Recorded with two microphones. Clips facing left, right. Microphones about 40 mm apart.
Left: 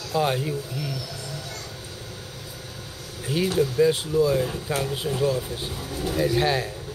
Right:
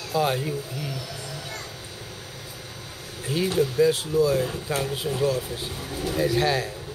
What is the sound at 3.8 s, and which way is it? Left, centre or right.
Speech, centre.